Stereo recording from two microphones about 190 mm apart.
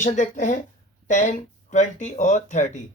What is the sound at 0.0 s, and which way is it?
Speech, 40° left (ahead or behind).